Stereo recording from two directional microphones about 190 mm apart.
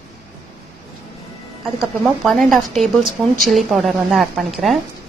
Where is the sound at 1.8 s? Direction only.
Centre (ahead or behind).